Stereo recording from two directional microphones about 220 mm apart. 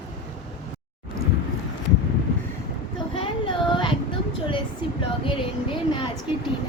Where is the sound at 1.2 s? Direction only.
40° left (ahead or behind).